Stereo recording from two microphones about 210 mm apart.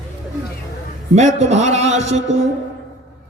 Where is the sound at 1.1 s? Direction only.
35° right (ahead or behind).